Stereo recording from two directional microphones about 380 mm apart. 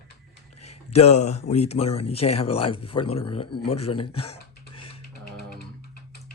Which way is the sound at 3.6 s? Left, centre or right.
Centre.